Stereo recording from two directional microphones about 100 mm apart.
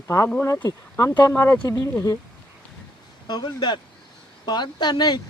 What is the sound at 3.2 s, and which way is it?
Speech, 45° left (ahead or behind).